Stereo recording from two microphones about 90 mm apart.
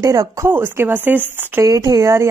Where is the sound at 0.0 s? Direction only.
40° right (ahead or behind); by 1.6 s 20° right (ahead or behind).